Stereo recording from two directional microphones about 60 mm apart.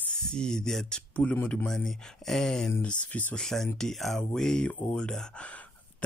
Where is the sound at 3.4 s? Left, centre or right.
Centre.